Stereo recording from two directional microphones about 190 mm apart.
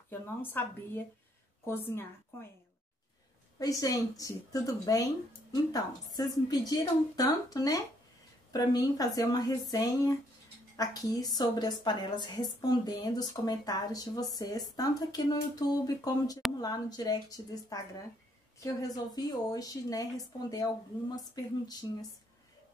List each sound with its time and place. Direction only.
0.1 s speech: 10° left (ahead or behind)
3.5 s a woman's voice: 20° left (ahead or behind)
18.9 s a woman's voice: 20° left (ahead or behind)